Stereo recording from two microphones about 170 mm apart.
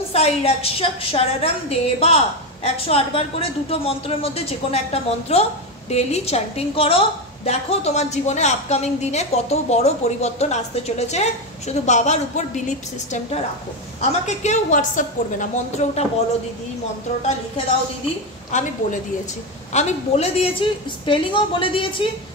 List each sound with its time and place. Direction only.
0.1 s a woman's voice: 35° left (ahead or behind)
18.5 s a woman's voice: 45° left (ahead or behind); by 22.0 s 30° left (ahead or behind)